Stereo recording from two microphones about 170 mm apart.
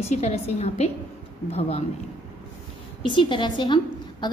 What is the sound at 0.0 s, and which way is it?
A woman's voice, 40° left (ahead or behind).